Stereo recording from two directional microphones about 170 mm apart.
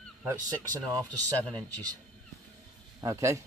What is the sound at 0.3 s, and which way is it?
Speech, 20° right (ahead or behind).